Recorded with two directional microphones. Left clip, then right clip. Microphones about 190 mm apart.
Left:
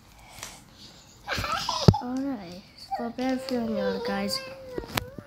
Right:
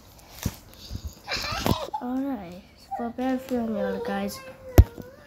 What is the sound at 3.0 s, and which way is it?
A child's voice, centre (ahead or behind).